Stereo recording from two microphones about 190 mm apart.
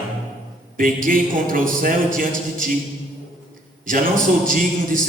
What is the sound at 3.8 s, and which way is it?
Speech, 45° right (ahead or behind).